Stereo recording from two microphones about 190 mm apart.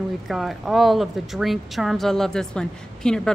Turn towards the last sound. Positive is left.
turn(degrees=5)  # may be behind; listen again after turning